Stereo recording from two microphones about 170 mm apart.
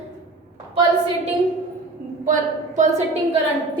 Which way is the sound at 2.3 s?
45° right (ahead or behind).